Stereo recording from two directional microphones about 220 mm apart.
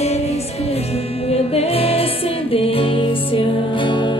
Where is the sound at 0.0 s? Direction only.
30° left (ahead or behind).